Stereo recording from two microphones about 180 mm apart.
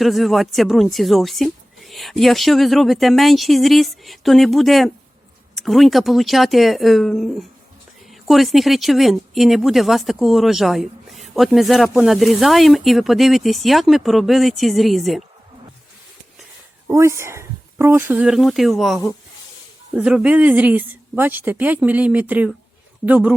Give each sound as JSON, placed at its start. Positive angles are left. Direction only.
{"t": 0.0, "sound": "a woman's voice", "side_deg": 0}
{"t": 16.8, "sound": "a woman's voice", "side_deg": -15}